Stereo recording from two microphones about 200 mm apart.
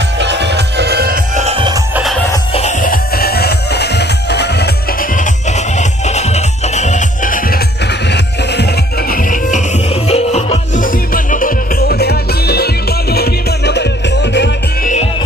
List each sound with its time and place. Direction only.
0.2 s music: 60° right (ahead or behind)
1.4 s music: 30° right (ahead or behind)
2.0 s music: centre (ahead or behind)
2.5 s music: 35° left (ahead or behind)
8.1 s music: 55° left (ahead or behind)